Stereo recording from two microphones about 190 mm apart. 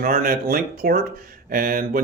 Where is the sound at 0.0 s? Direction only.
50° right (ahead or behind).